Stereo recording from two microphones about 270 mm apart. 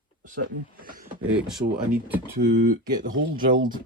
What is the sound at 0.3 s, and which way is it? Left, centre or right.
Speech, right.